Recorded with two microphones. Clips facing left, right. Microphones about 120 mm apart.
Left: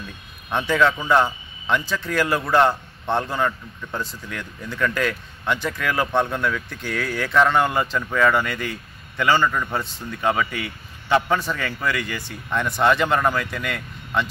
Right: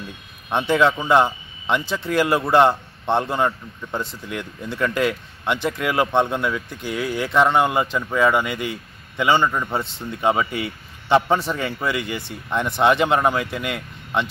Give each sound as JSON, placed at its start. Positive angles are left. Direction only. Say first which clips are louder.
{"t": 0.5, "sound": "a man's voice", "louder": "right 2 dB", "side_deg": -20}